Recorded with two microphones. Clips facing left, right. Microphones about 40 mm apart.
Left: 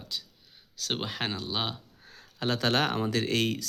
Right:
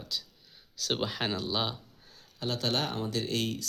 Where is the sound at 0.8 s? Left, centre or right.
Left.